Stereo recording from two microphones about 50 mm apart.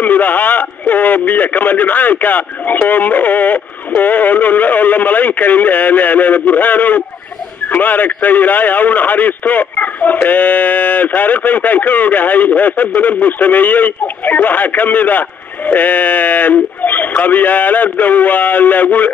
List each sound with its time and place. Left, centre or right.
0.0 s a man's voice: left